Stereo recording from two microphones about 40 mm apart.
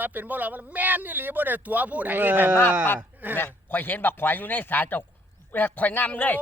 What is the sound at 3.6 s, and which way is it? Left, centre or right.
A man's voice, left.